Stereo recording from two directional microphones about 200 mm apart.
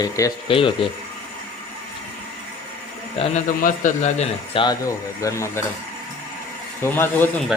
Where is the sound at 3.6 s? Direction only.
40° left (ahead or behind); by 5.6 s 15° left (ahead or behind).